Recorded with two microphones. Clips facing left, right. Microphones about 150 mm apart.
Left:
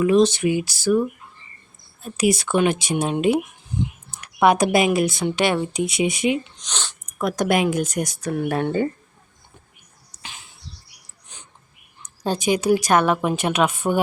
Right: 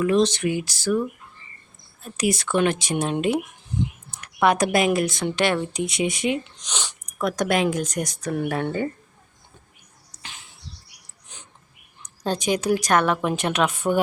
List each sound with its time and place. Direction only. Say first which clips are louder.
0.0 s speech: left 3 dB; 10° left (ahead or behind)
2.1 s speech: left 3 dB; 10° left (ahead or behind)
6.6 s speech: even; 10° right (ahead or behind)
7.0 s speech: left 2 dB; 5° left (ahead or behind)
8.5 s speech: left 4 dB; 20° left (ahead or behind)
12.0 s a woman's voice: left 2 dB; 5° left (ahead or behind)